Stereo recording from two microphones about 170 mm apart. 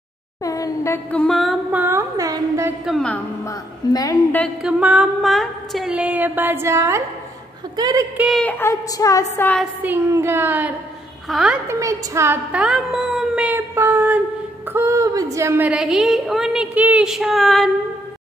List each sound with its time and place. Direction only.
0.4 s a sound: 20° left (ahead or behind); by 1.8 s centre (ahead or behind)
1.8 s music: 15° right (ahead or behind)
2.8 s a woman's voice: centre (ahead or behind)
3.4 s a woman's voice: 20° left (ahead or behind)
4.6 s music: 5° right (ahead or behind)
7.7 s speech: 20° right (ahead or behind)
8.4 s a woman's voice: 10° left (ahead or behind)
9.8 s music: 15° right (ahead or behind)
11.2 s a woman's voice: centre (ahead or behind)
11.6 s speech: 20° right (ahead or behind)
14.7 s music: 15° right (ahead or behind)
15.3 s a woman's voice: 15° right (ahead or behind); by 17.6 s centre (ahead or behind)